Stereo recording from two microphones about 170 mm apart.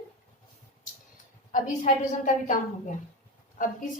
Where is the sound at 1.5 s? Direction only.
50° left (ahead or behind).